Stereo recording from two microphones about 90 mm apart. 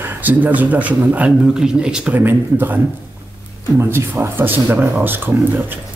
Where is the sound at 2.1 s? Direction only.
20° right (ahead or behind).